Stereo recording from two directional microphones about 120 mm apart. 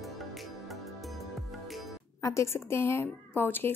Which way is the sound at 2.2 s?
25° left (ahead or behind).